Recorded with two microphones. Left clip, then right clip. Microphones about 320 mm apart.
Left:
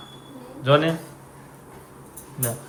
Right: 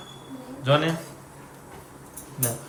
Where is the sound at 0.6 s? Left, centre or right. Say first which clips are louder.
Left 3 dB; centre.